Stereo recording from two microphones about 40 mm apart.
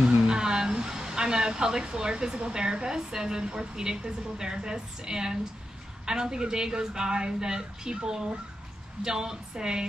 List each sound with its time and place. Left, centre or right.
0.3 s speech: centre